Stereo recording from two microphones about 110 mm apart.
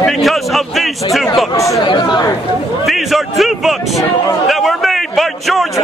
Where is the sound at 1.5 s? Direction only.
30° left (ahead or behind).